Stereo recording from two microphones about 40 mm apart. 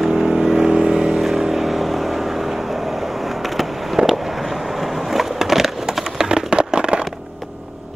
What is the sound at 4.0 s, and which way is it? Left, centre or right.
Skateboard, centre.